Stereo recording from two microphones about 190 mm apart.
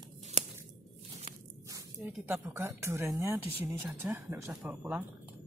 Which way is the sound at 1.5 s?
15° right (ahead or behind).